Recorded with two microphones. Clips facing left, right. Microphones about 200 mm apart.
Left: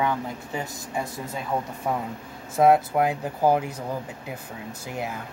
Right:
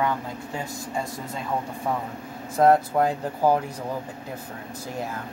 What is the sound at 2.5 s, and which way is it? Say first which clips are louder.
Speech: even; 10° left (ahead or behind).